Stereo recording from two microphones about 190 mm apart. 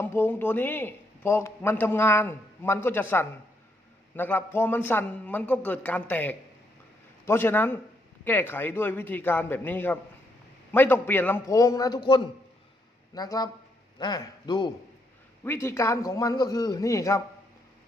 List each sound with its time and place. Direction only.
0.0 s a man's voice: 10° left (ahead or behind)